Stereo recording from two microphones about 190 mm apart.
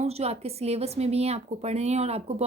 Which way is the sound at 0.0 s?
35° right (ahead or behind).